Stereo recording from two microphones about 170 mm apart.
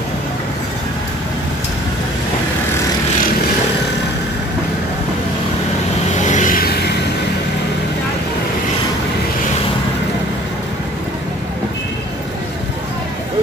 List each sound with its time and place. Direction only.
6.1 s vehicle: 45° left (ahead or behind)